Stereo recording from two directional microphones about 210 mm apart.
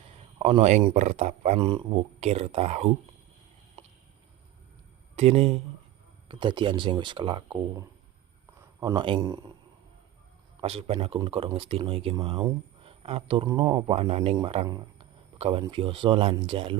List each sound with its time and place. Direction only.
0.3 s speech: 30° right (ahead or behind)
3.8 s a sound: 25° right (ahead or behind)
5.1 s speech: 30° right (ahead or behind)
10.6 s speech: 30° right (ahead or behind)